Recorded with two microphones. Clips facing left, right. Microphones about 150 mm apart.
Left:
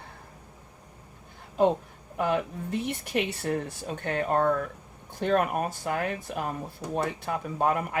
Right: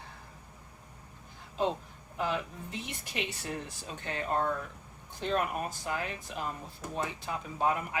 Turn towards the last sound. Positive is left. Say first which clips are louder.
# left 4 dB
turn(degrees=55)  # may be behind; listen again after turning